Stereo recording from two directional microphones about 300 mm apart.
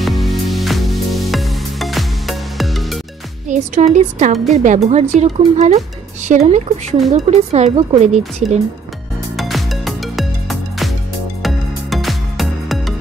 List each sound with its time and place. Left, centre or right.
0.0 s music: centre
3.4 s speech: right
9.4 s music: centre